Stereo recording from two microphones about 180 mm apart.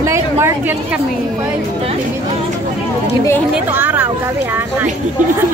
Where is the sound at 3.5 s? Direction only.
10° right (ahead or behind).